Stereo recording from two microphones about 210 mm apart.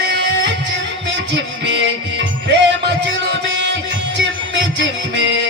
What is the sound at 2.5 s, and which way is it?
Music, 55° right (ahead or behind).